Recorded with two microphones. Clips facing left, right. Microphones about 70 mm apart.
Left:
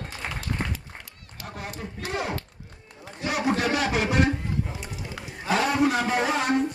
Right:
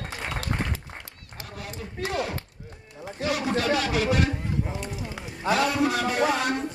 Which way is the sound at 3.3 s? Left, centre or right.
Left.